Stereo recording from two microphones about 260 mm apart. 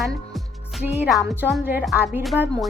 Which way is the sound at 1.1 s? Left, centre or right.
Centre.